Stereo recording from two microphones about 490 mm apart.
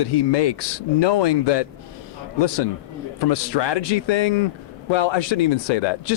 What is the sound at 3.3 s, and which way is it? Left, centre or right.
A man's voice, left.